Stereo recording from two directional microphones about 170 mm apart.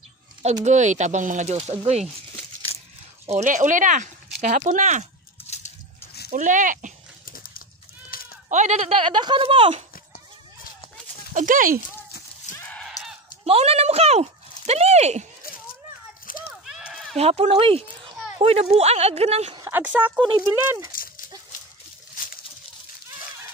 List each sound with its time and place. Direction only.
0.7 s speech: 45° right (ahead or behind)
2.7 s coin: 35° left (ahead or behind)
3.3 s speech: 45° right (ahead or behind)
6.3 s speech: 50° right (ahead or behind)
7.2 s a sound: 60° left (ahead or behind)
8.1 s sheep: 60° left (ahead or behind)
8.5 s speech: 45° right (ahead or behind)
11.3 s speech: 50° right (ahead or behind)
12.5 s a sound: 10° left (ahead or behind)
13.5 s speech: 35° right (ahead or behind)
16.3 s a sound: 55° left (ahead or behind)
16.6 s run: 5° right (ahead or behind)
17.2 s speech: 35° right (ahead or behind)
19.6 s speech: 10° right (ahead or behind)